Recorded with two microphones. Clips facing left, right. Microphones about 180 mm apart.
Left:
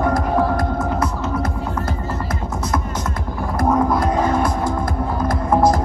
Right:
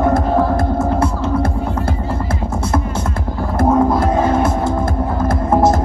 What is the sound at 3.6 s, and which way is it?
Music, 25° right (ahead or behind).